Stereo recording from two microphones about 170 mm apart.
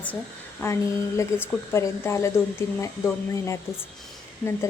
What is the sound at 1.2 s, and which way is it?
A woman's voice, 15° left (ahead or behind).